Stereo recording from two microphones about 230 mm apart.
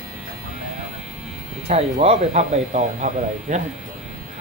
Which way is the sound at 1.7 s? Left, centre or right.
Right.